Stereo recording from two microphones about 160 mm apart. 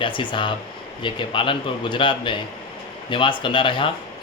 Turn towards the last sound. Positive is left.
turn(degrees=30)  # may be behind; listen again after turning